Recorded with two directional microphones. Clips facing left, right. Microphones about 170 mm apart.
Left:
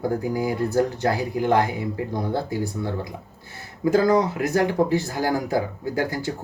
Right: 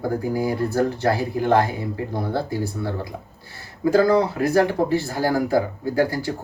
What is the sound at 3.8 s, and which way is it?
Speech, 20° left (ahead or behind).